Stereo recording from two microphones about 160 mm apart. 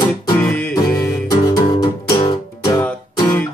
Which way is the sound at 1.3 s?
25° left (ahead or behind).